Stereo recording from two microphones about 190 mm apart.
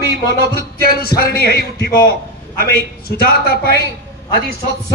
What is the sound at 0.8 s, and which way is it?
A man's voice, 50° left (ahead or behind).